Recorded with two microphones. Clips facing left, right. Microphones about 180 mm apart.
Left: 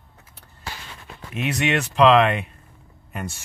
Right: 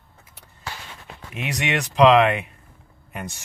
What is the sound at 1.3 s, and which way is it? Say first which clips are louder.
Speech: left 3 dB; 15° right (ahead or behind).